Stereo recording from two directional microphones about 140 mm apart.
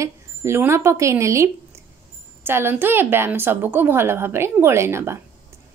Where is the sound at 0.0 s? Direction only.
20° right (ahead or behind).